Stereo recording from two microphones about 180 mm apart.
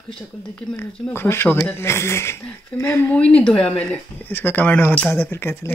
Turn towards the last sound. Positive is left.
turn(degrees=15)  # may be behind; listen again after turning